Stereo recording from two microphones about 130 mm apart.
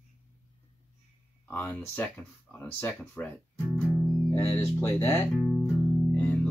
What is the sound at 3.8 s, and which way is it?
Music, centre (ahead or behind).